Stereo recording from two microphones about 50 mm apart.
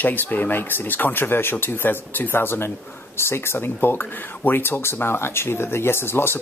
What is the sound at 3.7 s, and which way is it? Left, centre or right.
Speech, left.